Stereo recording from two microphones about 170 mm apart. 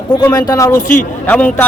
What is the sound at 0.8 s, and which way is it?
Speech, 50° left (ahead or behind).